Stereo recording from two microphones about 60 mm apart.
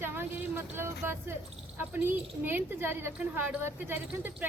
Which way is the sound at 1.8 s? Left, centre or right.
Right.